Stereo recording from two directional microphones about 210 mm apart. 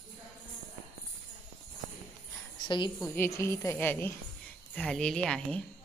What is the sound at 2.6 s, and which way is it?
A woman's voice, 20° left (ahead or behind).